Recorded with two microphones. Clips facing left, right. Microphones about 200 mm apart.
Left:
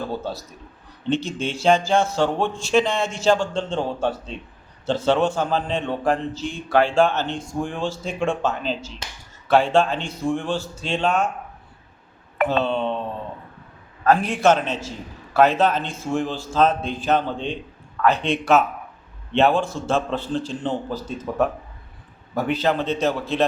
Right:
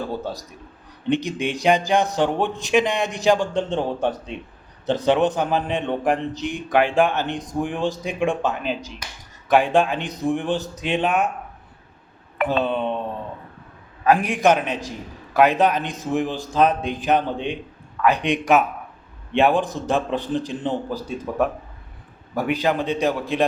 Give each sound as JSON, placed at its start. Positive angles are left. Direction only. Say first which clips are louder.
{"t": 1.1, "sound": "a man's voice", "louder": "right 2 dB", "side_deg": -15}
{"t": 12.5, "sound": "a man's voice", "louder": "right 1 dB", "side_deg": -15}
{"t": 14.0, "sound": "a man's voice", "louder": "even", "side_deg": -15}